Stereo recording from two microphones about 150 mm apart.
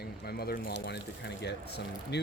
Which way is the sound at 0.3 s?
90° left.